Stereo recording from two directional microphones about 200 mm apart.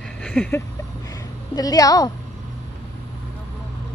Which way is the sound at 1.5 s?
20° left (ahead or behind).